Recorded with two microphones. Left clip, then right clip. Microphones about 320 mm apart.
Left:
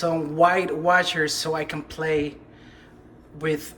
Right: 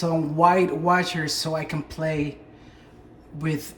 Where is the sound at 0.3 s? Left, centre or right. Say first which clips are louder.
Right 1 dB; centre.